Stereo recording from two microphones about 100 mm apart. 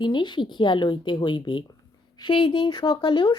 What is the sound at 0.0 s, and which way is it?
Speech, 50° left (ahead or behind).